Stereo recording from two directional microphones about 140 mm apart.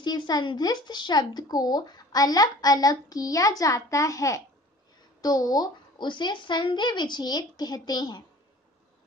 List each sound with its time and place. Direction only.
0.0 s speech: 30° left (ahead or behind)